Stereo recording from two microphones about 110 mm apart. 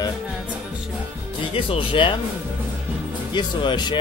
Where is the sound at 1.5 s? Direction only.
60° left (ahead or behind).